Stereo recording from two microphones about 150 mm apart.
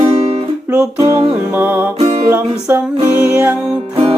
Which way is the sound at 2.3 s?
15° right (ahead or behind).